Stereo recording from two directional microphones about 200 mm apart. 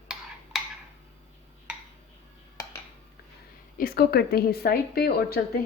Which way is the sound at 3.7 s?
50° left (ahead or behind).